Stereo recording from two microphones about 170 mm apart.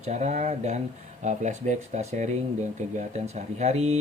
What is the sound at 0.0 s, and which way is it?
Speech, 40° right (ahead or behind).